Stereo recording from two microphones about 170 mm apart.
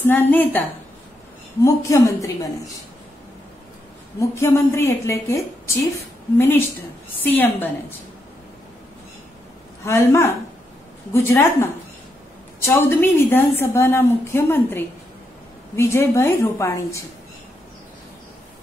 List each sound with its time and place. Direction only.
0.0 s a woman's voice: 10° left (ahead or behind)
4.2 s a woman's voice: 15° left (ahead or behind)
9.8 s a woman's voice: 15° left (ahead or behind)